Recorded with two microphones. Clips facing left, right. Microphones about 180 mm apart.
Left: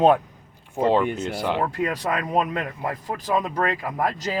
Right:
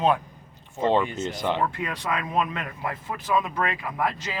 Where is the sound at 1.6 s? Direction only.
40° left (ahead or behind).